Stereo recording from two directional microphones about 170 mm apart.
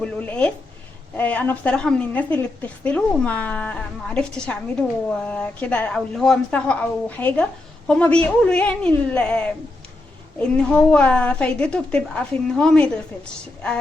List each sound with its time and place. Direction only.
0.0 s a woman's voice: 10° left (ahead or behind)